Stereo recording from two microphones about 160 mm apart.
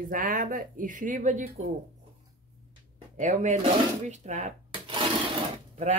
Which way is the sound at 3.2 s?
50° right (ahead or behind).